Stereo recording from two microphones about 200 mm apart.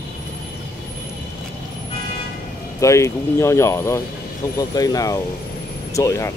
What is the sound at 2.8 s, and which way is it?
Speech, 15° left (ahead or behind).